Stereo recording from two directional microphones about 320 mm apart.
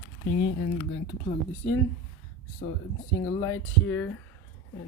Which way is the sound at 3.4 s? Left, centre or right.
Centre.